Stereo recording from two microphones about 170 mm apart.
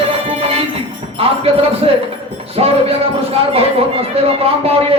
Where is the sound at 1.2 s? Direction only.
35° right (ahead or behind).